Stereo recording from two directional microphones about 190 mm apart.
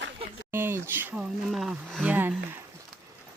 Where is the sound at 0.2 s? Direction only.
30° right (ahead or behind).